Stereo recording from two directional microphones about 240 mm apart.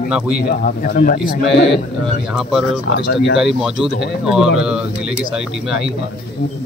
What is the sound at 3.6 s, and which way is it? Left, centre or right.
Speech, centre.